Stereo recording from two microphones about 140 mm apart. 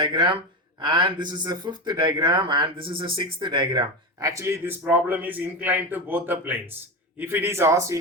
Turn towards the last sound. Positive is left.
turn(degrees=-20)  # may be behind; listen again after turning